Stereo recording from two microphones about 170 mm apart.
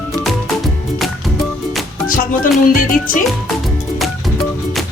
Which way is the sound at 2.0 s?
55° left (ahead or behind).